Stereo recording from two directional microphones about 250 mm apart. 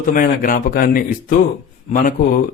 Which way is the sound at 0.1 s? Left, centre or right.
Left.